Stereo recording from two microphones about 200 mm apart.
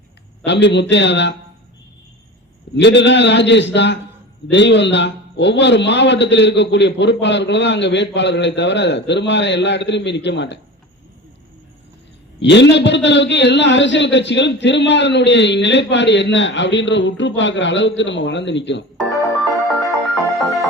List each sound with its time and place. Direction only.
0.4 s a man's voice: 60° left (ahead or behind)
2.7 s a man's voice: 60° left (ahead or behind)
12.4 s a man's voice: 60° left (ahead or behind)
19.0 s music: centre (ahead or behind)